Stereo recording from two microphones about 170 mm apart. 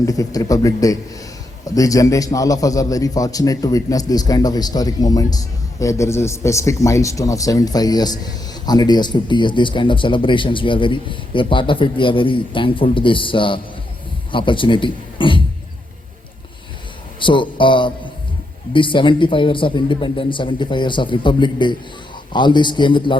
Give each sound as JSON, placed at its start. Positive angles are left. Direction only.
{"t": 0.0, "sound": "a man's voice", "side_deg": 20}
{"t": 17.2, "sound": "a man's voice", "side_deg": 30}